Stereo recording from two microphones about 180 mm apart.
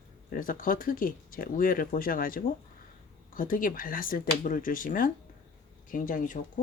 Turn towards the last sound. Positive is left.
turn(degrees=45)  # may be behind; listen again after turning